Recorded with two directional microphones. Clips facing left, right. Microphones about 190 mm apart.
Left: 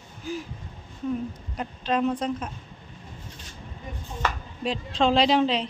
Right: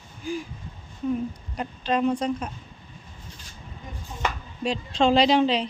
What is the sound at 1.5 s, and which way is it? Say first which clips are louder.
Speech: even; centre (ahead or behind).